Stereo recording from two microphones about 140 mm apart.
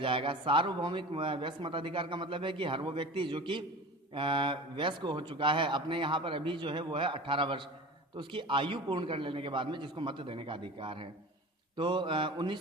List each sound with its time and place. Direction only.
0.0 s a man's voice: 40° right (ahead or behind)